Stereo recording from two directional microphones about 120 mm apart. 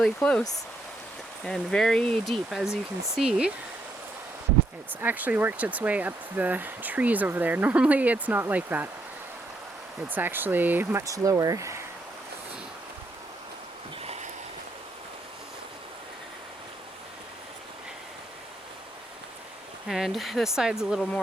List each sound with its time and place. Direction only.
0.0 s speech: 10° left (ahead or behind)
1.5 s speech: 5° left (ahead or behind)
4.9 s speech: 15° right (ahead or behind)
10.1 s speech: 15° right (ahead or behind)
11.0 s speech: 30° right (ahead or behind)
14.0 s a sound: 60° right (ahead or behind)
19.9 s speech: centre (ahead or behind)